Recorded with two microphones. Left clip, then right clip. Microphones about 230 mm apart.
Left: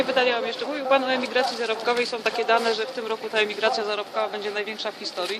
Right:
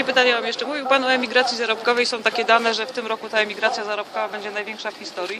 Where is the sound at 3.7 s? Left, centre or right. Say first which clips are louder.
Right 1 dB; right.